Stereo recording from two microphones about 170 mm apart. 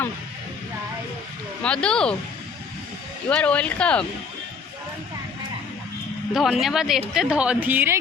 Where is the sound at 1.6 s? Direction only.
5° left (ahead or behind).